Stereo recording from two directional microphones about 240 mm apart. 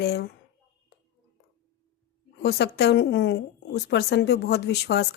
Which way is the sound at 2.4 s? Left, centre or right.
Left.